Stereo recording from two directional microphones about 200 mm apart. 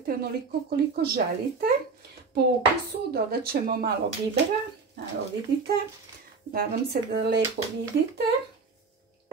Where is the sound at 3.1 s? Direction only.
50° right (ahead or behind).